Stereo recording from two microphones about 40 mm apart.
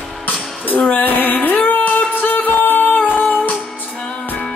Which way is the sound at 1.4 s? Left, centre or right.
Left.